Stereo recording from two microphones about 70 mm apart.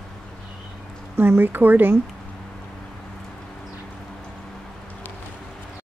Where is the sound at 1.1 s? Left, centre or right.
Right.